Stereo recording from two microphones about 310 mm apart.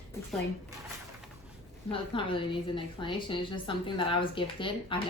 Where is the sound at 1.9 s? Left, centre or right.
Centre.